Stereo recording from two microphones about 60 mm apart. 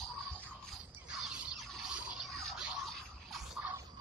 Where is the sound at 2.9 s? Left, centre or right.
Centre.